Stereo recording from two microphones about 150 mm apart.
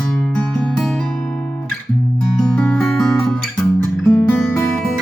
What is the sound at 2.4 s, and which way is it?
Music, 5° left (ahead or behind).